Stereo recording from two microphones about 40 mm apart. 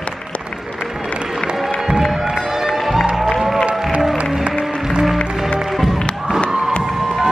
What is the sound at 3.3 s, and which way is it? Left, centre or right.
Music, centre.